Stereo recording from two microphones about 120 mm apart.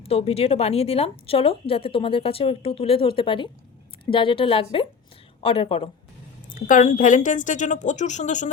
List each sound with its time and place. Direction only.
0.0 s speech: 55° left (ahead or behind)
6.5 s a woman's voice: 90° left